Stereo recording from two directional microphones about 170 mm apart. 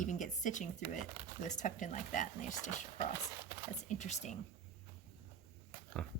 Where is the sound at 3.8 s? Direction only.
45° left (ahead or behind).